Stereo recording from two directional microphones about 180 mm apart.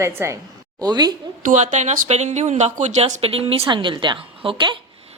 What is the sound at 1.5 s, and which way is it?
Speech, 40° right (ahead or behind).